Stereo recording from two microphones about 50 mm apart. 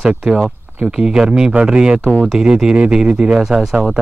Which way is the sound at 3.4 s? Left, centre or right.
Centre.